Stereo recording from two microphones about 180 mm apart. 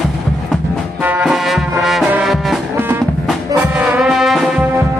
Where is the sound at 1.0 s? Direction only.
5° right (ahead or behind).